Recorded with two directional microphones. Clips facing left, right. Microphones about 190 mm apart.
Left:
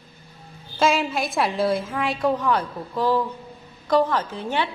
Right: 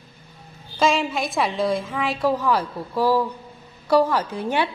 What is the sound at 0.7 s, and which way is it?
A woman's voice, centre (ahead or behind).